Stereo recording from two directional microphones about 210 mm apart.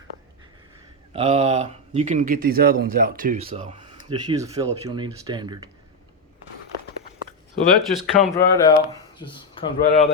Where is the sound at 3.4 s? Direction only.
25° right (ahead or behind).